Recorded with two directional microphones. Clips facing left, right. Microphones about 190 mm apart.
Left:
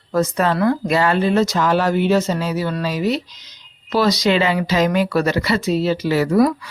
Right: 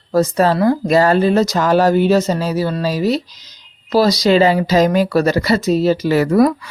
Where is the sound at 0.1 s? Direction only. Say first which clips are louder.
Right 4 dB; 35° right (ahead or behind).